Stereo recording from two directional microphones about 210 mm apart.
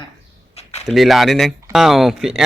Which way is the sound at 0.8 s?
Centre (ahead or behind).